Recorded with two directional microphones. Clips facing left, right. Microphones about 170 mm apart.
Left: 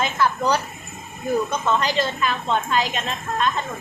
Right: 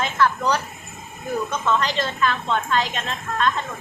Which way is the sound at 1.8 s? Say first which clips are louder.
Left 1 dB; 10° left (ahead or behind).